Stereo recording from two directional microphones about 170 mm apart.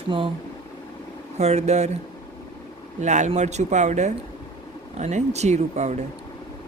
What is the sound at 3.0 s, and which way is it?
Speech, 45° right (ahead or behind).